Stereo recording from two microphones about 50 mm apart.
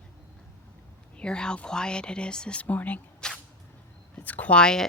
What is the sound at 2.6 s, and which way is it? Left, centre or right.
Speech, left.